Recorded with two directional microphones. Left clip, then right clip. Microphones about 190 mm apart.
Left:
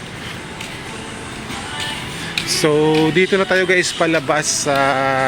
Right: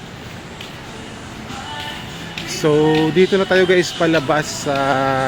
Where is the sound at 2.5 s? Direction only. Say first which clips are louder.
Even; 5° right (ahead or behind).